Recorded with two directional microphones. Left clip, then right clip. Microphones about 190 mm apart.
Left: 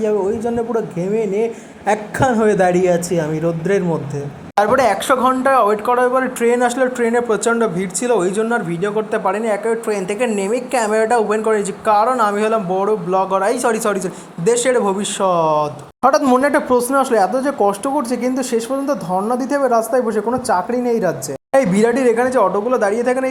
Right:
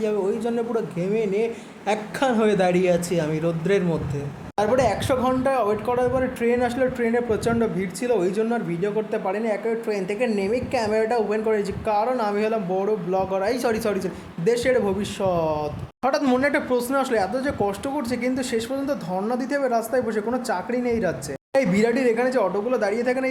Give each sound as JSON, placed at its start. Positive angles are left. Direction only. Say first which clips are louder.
{"t": 0.0, "sound": "speech", "louder": "left 6 dB", "side_deg": 15}
{"t": 7.3, "sound": "speech", "louder": "left 7 dB", "side_deg": -5}
{"t": 12.5, "sound": "speech", "louder": "left 7 dB", "side_deg": 10}
{"t": 19.1, "sound": "speech", "louder": "left 8 dB", "side_deg": 0}
{"t": 19.5, "sound": "speech", "louder": "left 8 dB", "side_deg": 20}